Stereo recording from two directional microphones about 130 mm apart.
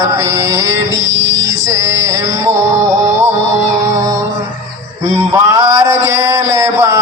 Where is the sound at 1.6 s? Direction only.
20° right (ahead or behind).